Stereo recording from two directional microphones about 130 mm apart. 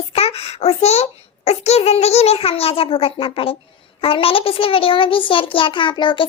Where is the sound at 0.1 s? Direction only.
50° left (ahead or behind).